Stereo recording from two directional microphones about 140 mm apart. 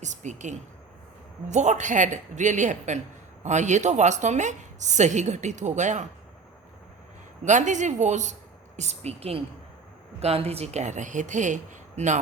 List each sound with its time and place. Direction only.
0.0 s a woman's voice: 60° right (ahead or behind)
7.4 s a woman's voice: 60° right (ahead or behind)